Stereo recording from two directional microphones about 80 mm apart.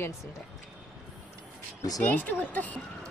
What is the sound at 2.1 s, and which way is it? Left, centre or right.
Speech, left.